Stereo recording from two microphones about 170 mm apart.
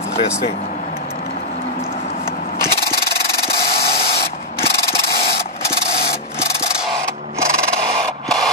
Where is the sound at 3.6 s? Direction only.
65° left (ahead or behind).